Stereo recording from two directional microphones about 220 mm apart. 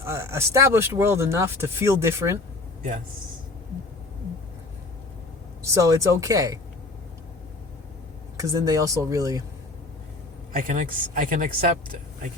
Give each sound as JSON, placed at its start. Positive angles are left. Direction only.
{"t": 0.0, "sound": "speech", "side_deg": -10}
{"t": 5.6, "sound": "speech", "side_deg": -15}
{"t": 8.4, "sound": "speech", "side_deg": -15}
{"t": 10.5, "sound": "a woman's voice", "side_deg": -40}